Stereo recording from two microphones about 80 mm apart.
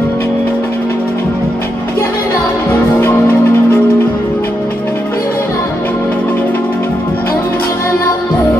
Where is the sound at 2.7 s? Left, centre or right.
Left.